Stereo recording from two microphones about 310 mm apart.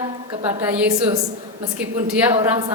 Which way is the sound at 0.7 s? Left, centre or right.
Centre.